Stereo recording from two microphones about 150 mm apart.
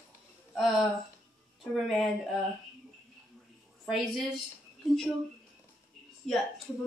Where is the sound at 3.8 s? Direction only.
Centre (ahead or behind).